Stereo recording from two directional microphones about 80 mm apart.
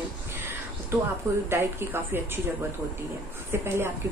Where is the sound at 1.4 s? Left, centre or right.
Right.